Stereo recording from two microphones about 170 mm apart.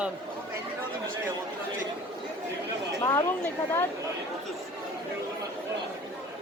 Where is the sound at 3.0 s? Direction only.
15° left (ahead or behind).